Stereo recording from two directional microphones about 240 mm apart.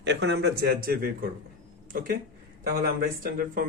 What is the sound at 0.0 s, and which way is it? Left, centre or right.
Speech, right.